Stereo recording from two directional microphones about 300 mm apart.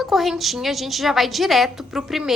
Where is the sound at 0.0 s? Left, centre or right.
Centre.